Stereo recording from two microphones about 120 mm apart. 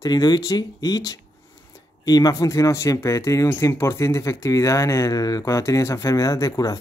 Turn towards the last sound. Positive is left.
turn(degrees=30)  # may be behind; listen again after turning